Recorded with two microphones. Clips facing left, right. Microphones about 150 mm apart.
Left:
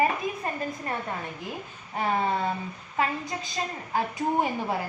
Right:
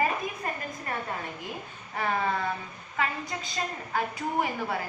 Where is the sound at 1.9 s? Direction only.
25° left (ahead or behind).